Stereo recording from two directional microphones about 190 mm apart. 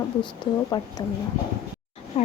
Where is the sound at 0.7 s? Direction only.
25° left (ahead or behind).